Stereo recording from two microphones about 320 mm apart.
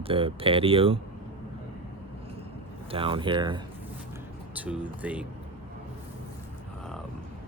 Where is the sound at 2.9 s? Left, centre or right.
Centre.